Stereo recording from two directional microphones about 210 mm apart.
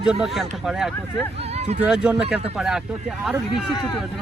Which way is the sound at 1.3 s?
30° right (ahead or behind).